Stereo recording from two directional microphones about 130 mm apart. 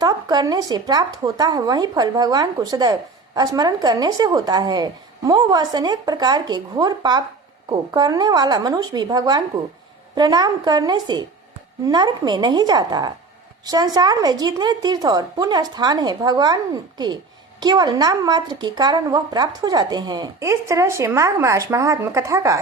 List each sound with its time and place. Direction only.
0.0 s speech: 30° right (ahead or behind)
20.4 s speech: 25° right (ahead or behind)